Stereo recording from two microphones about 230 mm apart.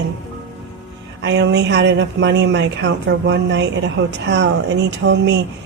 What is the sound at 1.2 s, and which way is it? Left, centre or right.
Speech, right.